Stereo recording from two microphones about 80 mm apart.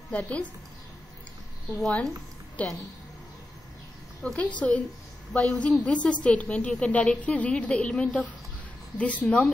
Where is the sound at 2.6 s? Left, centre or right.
Centre.